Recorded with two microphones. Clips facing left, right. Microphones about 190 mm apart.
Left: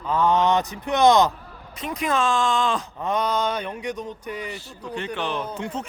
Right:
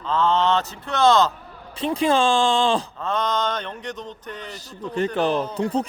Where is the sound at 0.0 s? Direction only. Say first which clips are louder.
Even; 10° left (ahead or behind).